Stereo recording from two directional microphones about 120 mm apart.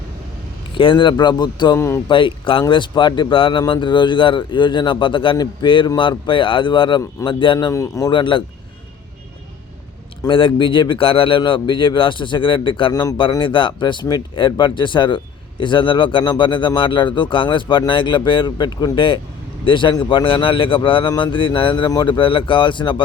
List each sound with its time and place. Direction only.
0.8 s speech: 45° left (ahead or behind)
1.7 s speech: 25° left (ahead or behind)
2.0 s speech: 45° left (ahead or behind)
7.7 s speech: 30° left (ahead or behind)
8.1 s speech: 45° left (ahead or behind)
10.2 s speech: 45° left (ahead or behind)
12.9 s speech: 30° left (ahead or behind)
13.4 s speech: 45° left (ahead or behind)
21.8 s speech: 35° left (ahead or behind)